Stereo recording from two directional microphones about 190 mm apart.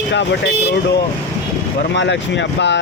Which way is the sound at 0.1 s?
65° left (ahead or behind).